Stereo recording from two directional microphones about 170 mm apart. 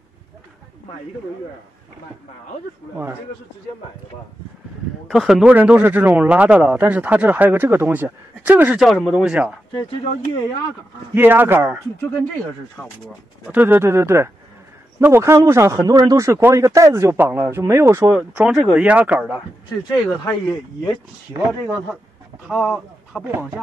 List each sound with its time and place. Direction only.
5.1 s speech: centre (ahead or behind)
8.8 s speech: centre (ahead or behind)
11.1 s speech: 10° right (ahead or behind)
13.5 s speech: 10° right (ahead or behind)
18.3 s speech: 5° right (ahead or behind)
19.8 s speech: 25° left (ahead or behind)
21.5 s speech: 5° right (ahead or behind)
23.2 s speech: 10° right (ahead or behind)